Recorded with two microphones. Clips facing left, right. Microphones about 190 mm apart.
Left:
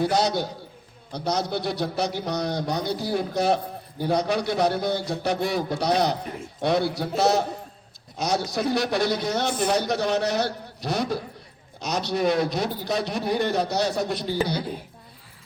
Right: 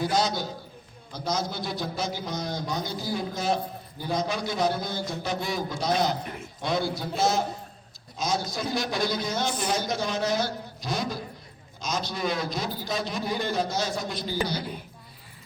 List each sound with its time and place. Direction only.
0.0 s a man's voice: 65° left (ahead or behind)
6.2 s a man's voice: 30° left (ahead or behind)
6.6 s a man's voice: 65° left (ahead or behind)